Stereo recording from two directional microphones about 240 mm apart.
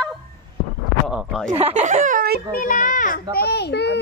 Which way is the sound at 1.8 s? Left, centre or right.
Right.